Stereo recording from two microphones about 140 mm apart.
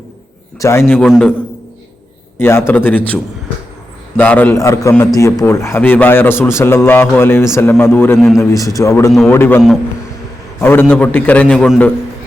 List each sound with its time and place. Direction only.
0.6 s a man's voice: 20° left (ahead or behind)
1.0 s a man's voice: 5° left (ahead or behind)
2.4 s a man's voice: 15° left (ahead or behind)
4.2 s a man's voice: 10° left (ahead or behind)